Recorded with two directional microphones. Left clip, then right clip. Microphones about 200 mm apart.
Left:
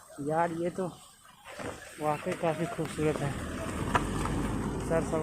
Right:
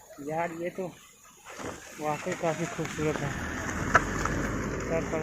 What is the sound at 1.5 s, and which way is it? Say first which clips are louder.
Snake: right 1 dB; 55° right (ahead or behind).